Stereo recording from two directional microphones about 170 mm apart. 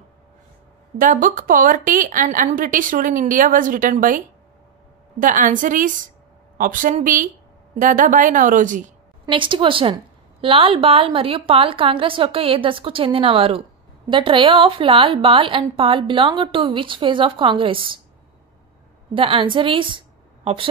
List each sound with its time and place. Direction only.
0.9 s a woman's voice: 50° right (ahead or behind)
5.2 s a woman's voice: 50° right (ahead or behind)
9.2 s a woman's voice: 30° right (ahead or behind)
19.1 s a woman's voice: 30° right (ahead or behind)